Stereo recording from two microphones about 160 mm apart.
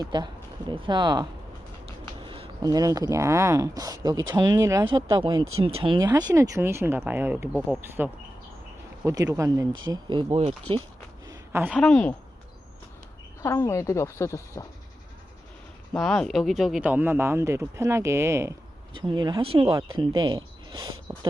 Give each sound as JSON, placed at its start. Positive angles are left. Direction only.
{"t": 0.0, "sound": "speech", "side_deg": -25}
{"t": 2.2, "sound": "a sound", "side_deg": -35}
{"t": 2.6, "sound": "speech", "side_deg": -20}
{"t": 10.3, "sound": "speech", "side_deg": -40}
{"t": 11.3, "sound": "a sound", "side_deg": -15}
{"t": 11.7, "sound": "a woman's voice", "side_deg": 5}
{"t": 13.4, "sound": "speech", "side_deg": 15}
{"t": 16.0, "sound": "speech", "side_deg": 5}
{"t": 18.9, "sound": "speech", "side_deg": -30}